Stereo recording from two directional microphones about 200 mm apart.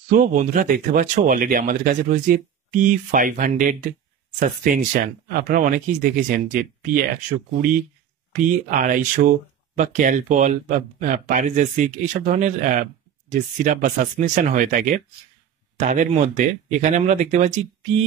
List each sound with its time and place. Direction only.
0.1 s speech: 40° right (ahead or behind)
8.6 s speech: 45° right (ahead or behind)